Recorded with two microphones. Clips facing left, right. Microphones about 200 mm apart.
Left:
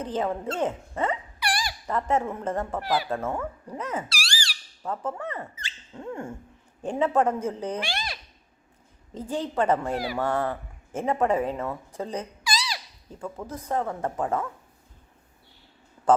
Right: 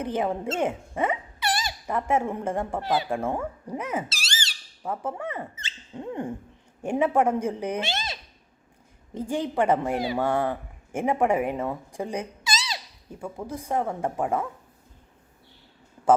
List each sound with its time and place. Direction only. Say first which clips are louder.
0.0 s speech: right 1 dB; 15° right (ahead or behind)
0.4 s speech: right 1 dB; 25° right (ahead or behind)
0.7 s speech: right 1 dB; 10° right (ahead or behind)
1.4 s dog: right 2 dB; 25° right (ahead or behind)
1.9 s speech: right 1 dB; 10° right (ahead or behind)
2.8 s speech: right 1 dB; 25° right (ahead or behind)
3.1 s speech: right 1 dB; 10° right (ahead or behind)
4.1 s squeak: left 1 dB; 20° right (ahead or behind)
5.5 s a sound: right 3 dB; 20° right (ahead or behind)
6.8 s speech: right 1 dB; 10° right (ahead or behind)
7.8 s a sound: right 2 dB; 20° right (ahead or behind)
9.1 s speech: right 2 dB; 10° right (ahead or behind)
12.4 s a sound: left 1 dB; 20° right (ahead or behind)
13.1 s speech: right 1 dB; 10° right (ahead or behind)